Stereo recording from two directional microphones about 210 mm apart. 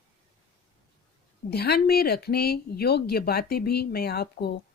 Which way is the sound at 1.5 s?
50° left (ahead or behind).